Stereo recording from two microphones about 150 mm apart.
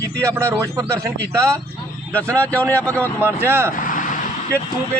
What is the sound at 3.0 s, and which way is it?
Speech, 15° right (ahead or behind).